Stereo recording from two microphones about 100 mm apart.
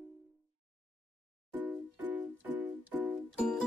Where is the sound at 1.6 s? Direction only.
15° right (ahead or behind).